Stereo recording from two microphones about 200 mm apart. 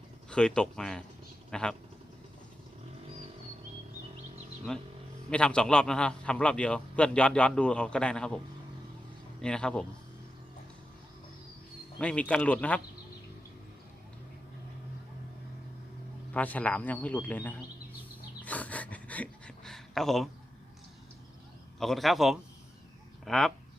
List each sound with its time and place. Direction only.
0.3 s a man's voice: 5° left (ahead or behind)
4.7 s a man's voice: 5° left (ahead or behind)
9.4 s a man's voice: 5° left (ahead or behind)
11.9 s a man's voice: 5° left (ahead or behind)
16.3 s a man's voice: 5° left (ahead or behind)
18.4 s a sound: 5° left (ahead or behind)
21.8 s a man's voice: centre (ahead or behind)